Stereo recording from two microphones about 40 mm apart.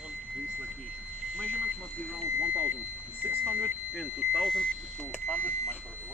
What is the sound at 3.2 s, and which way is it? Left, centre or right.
Smoke detector, right.